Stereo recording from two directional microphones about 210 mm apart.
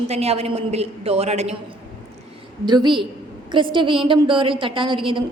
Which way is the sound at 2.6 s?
20° right (ahead or behind).